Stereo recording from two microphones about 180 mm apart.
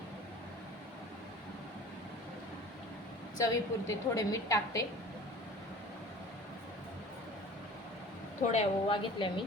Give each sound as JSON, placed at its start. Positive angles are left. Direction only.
{"t": 3.3, "sound": "a woman's voice", "side_deg": 20}
{"t": 8.5, "sound": "a woman's voice", "side_deg": 30}